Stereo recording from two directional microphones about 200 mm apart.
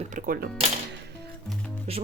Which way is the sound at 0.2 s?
40° right (ahead or behind).